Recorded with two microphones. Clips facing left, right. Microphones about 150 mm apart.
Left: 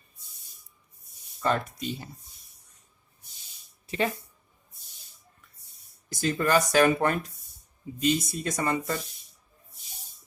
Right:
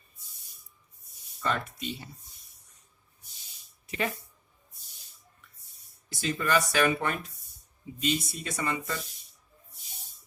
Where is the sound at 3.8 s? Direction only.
30° left (ahead or behind).